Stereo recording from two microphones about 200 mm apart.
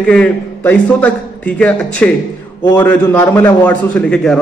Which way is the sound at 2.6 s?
20° left (ahead or behind).